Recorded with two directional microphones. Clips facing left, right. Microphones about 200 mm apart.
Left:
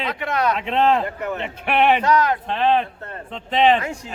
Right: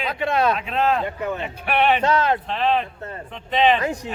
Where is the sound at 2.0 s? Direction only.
25° right (ahead or behind).